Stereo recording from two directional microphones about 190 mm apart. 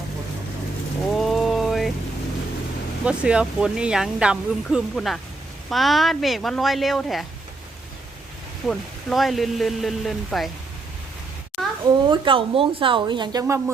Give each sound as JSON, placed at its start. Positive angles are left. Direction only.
{"t": 1.2, "sound": "rain on surface", "side_deg": 0}
{"t": 3.0, "sound": "speech", "side_deg": -5}
{"t": 8.6, "sound": "speech", "side_deg": 5}
{"t": 11.6, "sound": "a sound", "side_deg": 0}
{"t": 12.0, "sound": "speech", "side_deg": -25}